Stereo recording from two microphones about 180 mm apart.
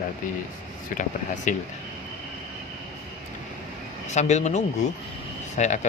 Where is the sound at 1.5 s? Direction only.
45° left (ahead or behind).